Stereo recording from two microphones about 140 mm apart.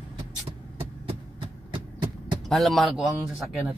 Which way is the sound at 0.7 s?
40° right (ahead or behind).